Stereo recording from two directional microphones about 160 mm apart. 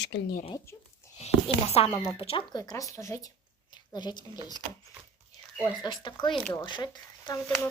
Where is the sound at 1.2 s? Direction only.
40° left (ahead or behind).